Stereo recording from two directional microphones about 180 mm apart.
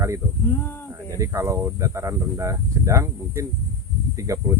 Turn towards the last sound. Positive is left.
turn(degrees=-15)  # may be behind; listen again after turning